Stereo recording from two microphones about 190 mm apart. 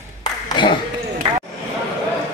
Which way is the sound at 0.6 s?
25° left (ahead or behind).